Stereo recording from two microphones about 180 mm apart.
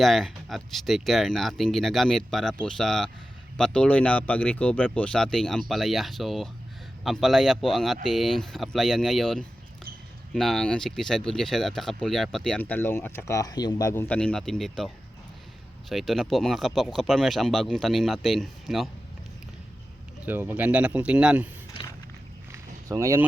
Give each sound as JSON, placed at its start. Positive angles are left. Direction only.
{"t": 0.0, "sound": "speech", "side_deg": 0}
{"t": 15.9, "sound": "speech", "side_deg": 0}
{"t": 20.2, "sound": "speech", "side_deg": -10}
{"t": 22.5, "sound": "a sound", "side_deg": -15}